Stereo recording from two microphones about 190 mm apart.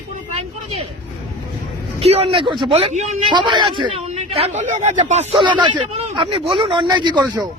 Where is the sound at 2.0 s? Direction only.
30° right (ahead or behind).